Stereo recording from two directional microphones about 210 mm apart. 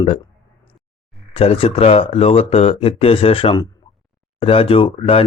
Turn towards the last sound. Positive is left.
turn(degrees=25)  # may be behind; listen again after turning